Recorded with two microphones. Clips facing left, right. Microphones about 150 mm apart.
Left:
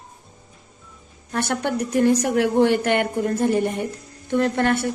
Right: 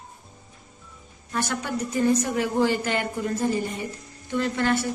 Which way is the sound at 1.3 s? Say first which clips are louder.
Left 5 dB; 65° left (ahead or behind).